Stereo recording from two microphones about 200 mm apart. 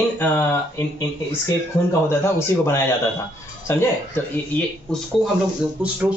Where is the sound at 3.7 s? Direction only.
15° left (ahead or behind).